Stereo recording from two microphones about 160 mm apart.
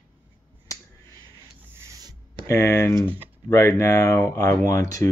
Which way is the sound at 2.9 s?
25° right (ahead or behind).